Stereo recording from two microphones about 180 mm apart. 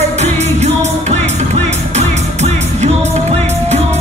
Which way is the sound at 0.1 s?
40° right (ahead or behind).